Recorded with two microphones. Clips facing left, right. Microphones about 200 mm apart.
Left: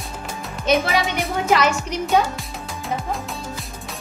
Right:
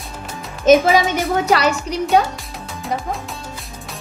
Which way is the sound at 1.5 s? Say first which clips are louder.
Right 2 dB; 35° right (ahead or behind).